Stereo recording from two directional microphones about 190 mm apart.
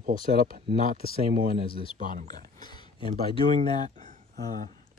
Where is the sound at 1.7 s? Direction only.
30° left (ahead or behind).